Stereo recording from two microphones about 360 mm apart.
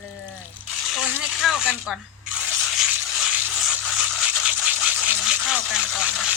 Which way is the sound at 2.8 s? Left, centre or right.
Centre.